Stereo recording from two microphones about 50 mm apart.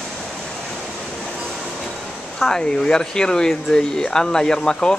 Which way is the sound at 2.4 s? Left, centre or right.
Centre.